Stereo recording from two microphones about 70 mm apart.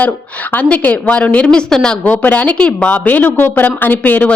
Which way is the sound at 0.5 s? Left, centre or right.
Left.